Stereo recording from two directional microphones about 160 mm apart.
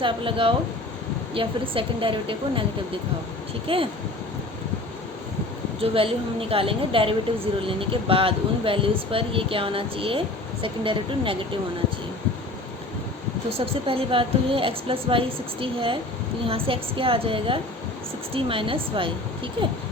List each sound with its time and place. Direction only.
0.0 s speech: 30° right (ahead or behind)
3.7 s speech: 35° right (ahead or behind)
5.8 s speech: 35° right (ahead or behind)
13.8 s speech: 35° right (ahead or behind)